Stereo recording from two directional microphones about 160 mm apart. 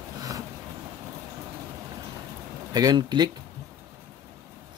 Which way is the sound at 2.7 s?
25° right (ahead or behind).